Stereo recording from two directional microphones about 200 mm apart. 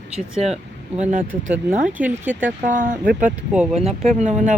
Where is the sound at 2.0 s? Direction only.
10° right (ahead or behind).